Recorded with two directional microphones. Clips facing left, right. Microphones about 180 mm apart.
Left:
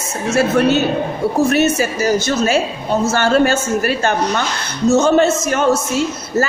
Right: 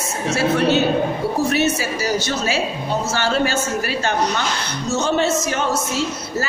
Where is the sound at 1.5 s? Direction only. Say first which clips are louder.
Left 4 dB; 50° left (ahead or behind).